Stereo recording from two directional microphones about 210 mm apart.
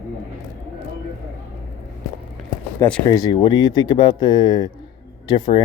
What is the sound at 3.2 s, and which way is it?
Speech, 20° left (ahead or behind).